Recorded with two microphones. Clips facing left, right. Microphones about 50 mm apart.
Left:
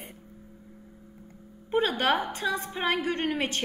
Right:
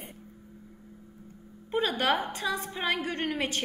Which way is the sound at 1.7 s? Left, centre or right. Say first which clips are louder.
Left 2 dB; centre.